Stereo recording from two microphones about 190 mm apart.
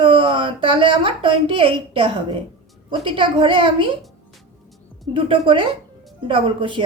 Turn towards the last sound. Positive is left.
turn(degrees=-25)  # may be behind; listen again after turning